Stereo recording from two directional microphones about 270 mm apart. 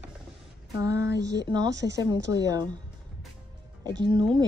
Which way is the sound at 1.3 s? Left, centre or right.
Centre.